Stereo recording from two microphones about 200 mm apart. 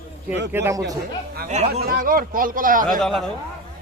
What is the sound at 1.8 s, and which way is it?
Speech, 45° right (ahead or behind).